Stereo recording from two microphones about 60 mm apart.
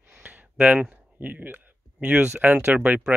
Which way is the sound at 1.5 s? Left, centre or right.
Right.